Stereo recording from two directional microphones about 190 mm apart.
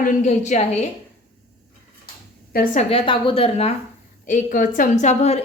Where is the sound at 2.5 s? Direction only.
40° left (ahead or behind).